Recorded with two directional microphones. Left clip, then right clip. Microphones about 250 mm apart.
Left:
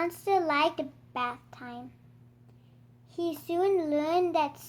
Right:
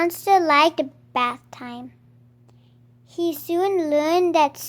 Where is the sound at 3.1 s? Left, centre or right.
Right.